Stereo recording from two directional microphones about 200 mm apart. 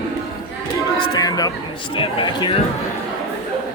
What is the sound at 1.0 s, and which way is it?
Chatter, 20° left (ahead or behind).